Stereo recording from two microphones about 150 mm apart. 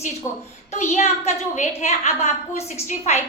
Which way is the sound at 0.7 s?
50° left (ahead or behind).